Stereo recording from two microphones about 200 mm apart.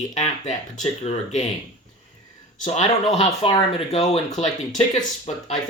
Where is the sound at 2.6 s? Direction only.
35° left (ahead or behind).